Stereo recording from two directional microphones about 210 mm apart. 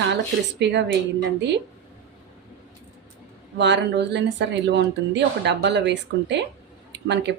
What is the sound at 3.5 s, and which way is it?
Speech, 55° right (ahead or behind).